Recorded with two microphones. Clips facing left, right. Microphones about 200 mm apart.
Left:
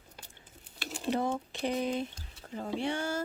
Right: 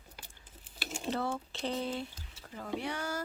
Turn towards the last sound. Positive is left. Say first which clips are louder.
# left 4 dB
turn(degrees=25)  # may be behind; listen again after turning